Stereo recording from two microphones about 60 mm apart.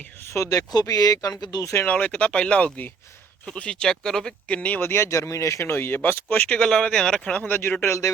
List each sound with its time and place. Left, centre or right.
0.3 s speech: left
1.9 s speech: left
4.4 s speech: left
4.8 s speech: left
5.0 s speech: left
5.6 s speech: left
6.6 s speech: centre
7.3 s speech: left